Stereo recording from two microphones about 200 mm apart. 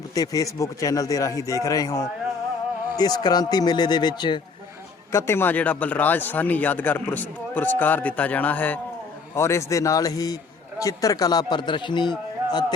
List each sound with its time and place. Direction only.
0.1 s a man's voice: 15° left (ahead or behind)